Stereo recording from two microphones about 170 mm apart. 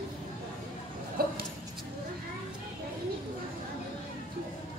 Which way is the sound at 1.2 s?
60° right (ahead or behind).